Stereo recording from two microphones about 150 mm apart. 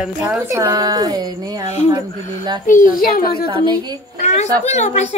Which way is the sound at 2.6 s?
65° left (ahead or behind).